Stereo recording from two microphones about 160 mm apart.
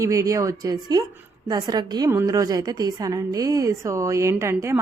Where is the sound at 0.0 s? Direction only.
20° right (ahead or behind).